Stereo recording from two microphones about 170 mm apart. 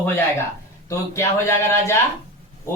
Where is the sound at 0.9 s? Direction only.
15° left (ahead or behind).